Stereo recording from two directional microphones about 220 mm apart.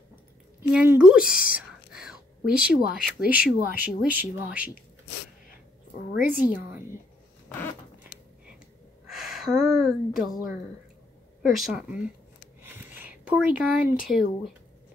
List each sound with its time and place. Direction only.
0.6 s whispering: 5° right (ahead or behind)
2.6 s speech: 40° left (ahead or behind)
3.3 s speech: 5° right (ahead or behind)
6.1 s a woman's voice: 40° left (ahead or behind)
9.0 s gasp: centre (ahead or behind)
11.5 s speech: centre (ahead or behind)
12.6 s a sound: 10° right (ahead or behind)
14.0 s speech: centre (ahead or behind)